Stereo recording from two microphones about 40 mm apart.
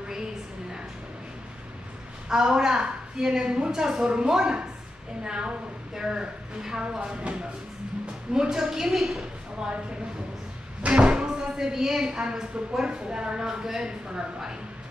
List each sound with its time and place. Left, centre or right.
2.2 s a woman's voice: centre
8.9 s a woman's voice: centre
10.8 s speech: right